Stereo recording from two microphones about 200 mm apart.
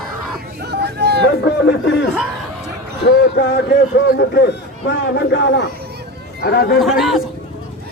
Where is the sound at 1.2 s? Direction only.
65° left (ahead or behind).